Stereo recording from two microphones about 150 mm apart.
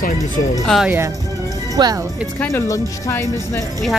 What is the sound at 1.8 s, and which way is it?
Speech, 30° right (ahead or behind).